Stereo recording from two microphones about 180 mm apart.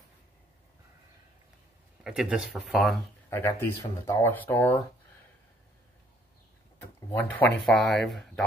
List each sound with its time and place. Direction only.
2.0 s speech: 5° right (ahead or behind)
3.3 s speech: 15° left (ahead or behind)
7.2 s speech: 10° left (ahead or behind)